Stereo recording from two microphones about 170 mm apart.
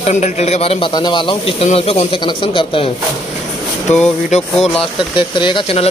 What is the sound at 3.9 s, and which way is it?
Speech, 45° left (ahead or behind).